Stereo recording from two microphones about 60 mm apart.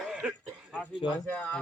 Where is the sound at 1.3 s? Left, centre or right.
Left.